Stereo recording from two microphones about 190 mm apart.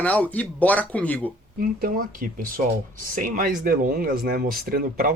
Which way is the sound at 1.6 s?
50° right (ahead or behind).